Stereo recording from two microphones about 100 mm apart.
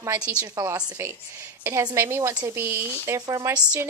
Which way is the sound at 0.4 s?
35° right (ahead or behind).